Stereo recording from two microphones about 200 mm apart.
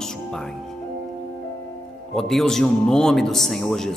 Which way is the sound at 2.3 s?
Centre (ahead or behind).